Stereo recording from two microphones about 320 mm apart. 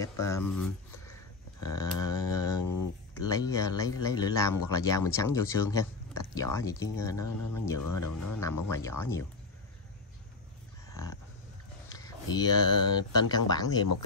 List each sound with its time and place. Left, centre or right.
0.0 s speech: centre
1.7 s a sound: centre
2.6 s a sound: left
3.3 s speech: centre
7.8 s speech: left
8.6 s speech: centre
11.9 s speech: centre